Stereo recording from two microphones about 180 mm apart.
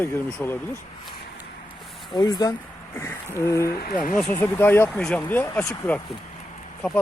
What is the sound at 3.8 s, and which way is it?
Speech, 50° left (ahead or behind).